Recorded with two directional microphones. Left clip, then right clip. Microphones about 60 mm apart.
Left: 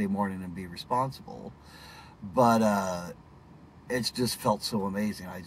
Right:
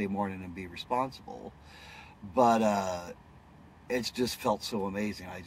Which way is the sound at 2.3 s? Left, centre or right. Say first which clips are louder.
Left 1 dB; right.